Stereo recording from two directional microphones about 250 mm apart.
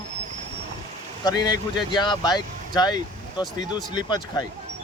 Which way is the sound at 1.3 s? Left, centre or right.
Centre.